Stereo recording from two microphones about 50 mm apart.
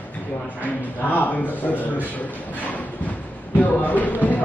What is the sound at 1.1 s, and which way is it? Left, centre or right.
Speech, left.